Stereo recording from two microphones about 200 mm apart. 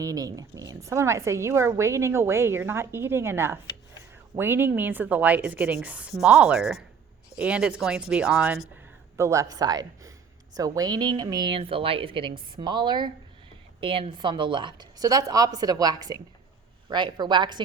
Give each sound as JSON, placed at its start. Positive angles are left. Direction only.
{"t": 0.0, "sound": "a woman's voice", "side_deg": -15}
{"t": 9.1, "sound": "a woman's voice", "side_deg": -15}